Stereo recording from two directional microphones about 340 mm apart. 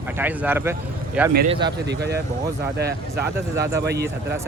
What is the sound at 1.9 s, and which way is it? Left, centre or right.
Speech, right.